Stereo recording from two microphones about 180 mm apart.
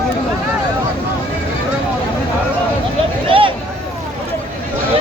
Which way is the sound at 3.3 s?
30° right (ahead or behind).